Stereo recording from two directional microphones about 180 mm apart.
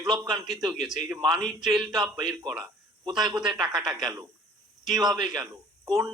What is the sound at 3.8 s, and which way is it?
Speech, 20° right (ahead or behind).